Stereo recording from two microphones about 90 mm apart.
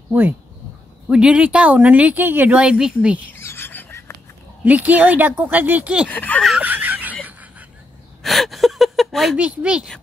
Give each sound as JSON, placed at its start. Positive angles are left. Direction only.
{"t": 0.1, "sound": "speech", "side_deg": -20}
{"t": 1.0, "sound": "speech", "side_deg": -10}
{"t": 3.3, "sound": "a sound", "side_deg": 25}
{"t": 4.6, "sound": "speech", "side_deg": -20}
{"t": 6.0, "sound": "speech", "side_deg": 20}
{"t": 6.6, "sound": "a sound", "side_deg": -20}
{"t": 8.2, "sound": "gasp", "side_deg": 0}
{"t": 9.4, "sound": "speech", "side_deg": -10}